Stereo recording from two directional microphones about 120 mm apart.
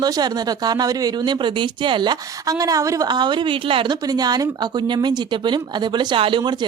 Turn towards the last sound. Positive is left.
turn(degrees=-40)  # may be behind; listen again after turning